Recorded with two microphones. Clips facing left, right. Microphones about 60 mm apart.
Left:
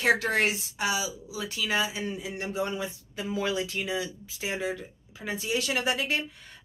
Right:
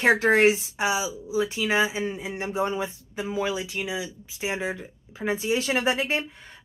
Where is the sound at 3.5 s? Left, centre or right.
Centre.